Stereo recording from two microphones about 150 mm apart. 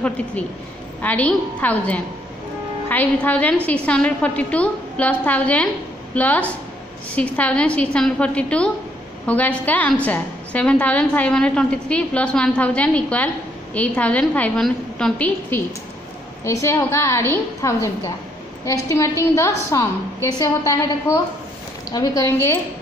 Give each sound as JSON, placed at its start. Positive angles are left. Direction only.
{"t": 1.0, "sound": "a woman's voice", "side_deg": 10}
{"t": 21.9, "sound": "a woman's voice", "side_deg": 25}